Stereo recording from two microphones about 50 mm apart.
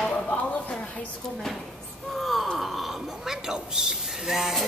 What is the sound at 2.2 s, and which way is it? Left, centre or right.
Speech, centre.